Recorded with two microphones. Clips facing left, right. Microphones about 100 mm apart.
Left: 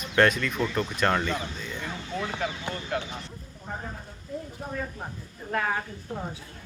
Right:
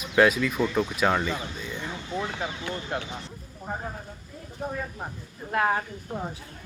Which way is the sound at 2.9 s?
25° right (ahead or behind).